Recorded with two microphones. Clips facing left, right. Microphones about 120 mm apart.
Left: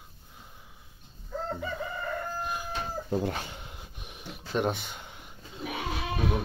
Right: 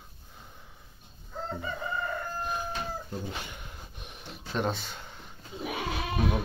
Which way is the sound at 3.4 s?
25° left (ahead or behind).